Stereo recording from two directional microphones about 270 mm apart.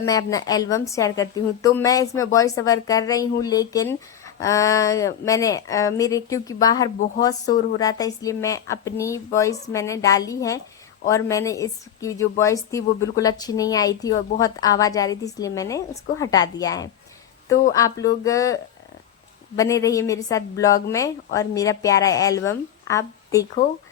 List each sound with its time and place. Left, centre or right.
0.0 s a woman's voice: centre
7.4 s a woman's voice: left
7.8 s a woman's voice: centre